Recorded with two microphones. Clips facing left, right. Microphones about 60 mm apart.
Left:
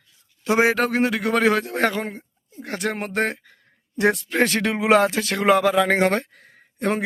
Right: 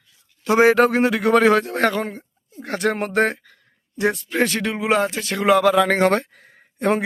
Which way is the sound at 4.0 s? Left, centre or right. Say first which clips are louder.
Left 1 dB; left.